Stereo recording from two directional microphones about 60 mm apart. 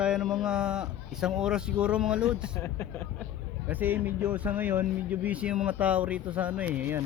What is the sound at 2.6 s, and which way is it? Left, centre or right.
Speech, left.